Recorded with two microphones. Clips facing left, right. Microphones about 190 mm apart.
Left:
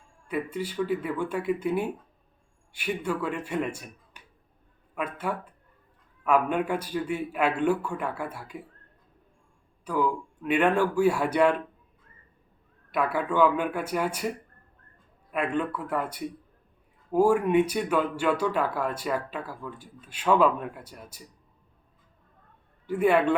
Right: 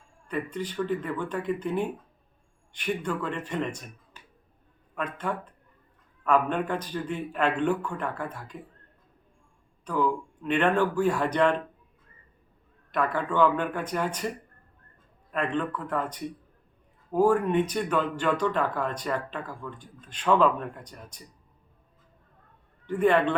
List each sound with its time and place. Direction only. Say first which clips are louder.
0.3 s speech: left 1 dB; 10° left (ahead or behind)
9.8 s speech: even; 10° left (ahead or behind)
12.9 s speech: left 1 dB; 10° left (ahead or behind)
22.9 s speech: even; 10° left (ahead or behind)